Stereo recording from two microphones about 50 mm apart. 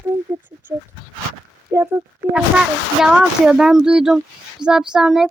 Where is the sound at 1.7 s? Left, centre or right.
Right.